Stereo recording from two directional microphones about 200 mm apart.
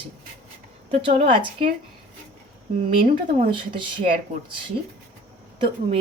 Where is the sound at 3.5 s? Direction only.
25° right (ahead or behind).